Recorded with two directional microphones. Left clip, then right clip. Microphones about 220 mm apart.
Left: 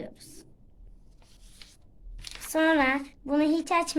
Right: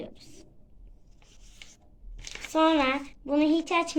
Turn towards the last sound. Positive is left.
turn(degrees=40)  # may be behind; listen again after turning